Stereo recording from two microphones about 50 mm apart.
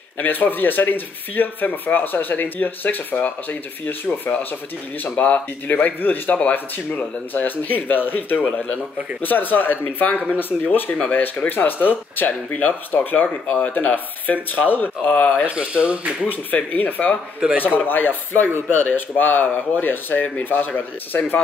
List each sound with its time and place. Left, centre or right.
0.2 s speech: left
5.0 s speech: left
15.5 s speech: right
16.5 s speech: left
17.4 s speech: right
17.7 s speech: left